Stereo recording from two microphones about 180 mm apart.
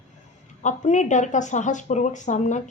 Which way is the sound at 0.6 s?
40° left (ahead or behind).